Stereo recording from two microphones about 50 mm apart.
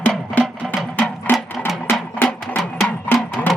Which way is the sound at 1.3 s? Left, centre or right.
Left.